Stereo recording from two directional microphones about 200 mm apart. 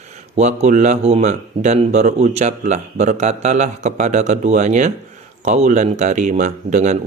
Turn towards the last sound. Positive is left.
turn(degrees=-40)  # may be behind; listen again after turning